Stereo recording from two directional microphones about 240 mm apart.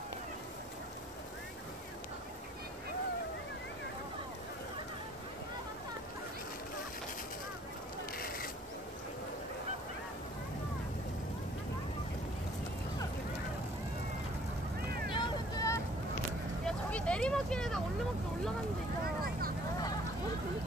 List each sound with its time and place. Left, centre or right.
8.2 s a sound: left
15.0 s vehicle: centre
16.6 s vehicle: centre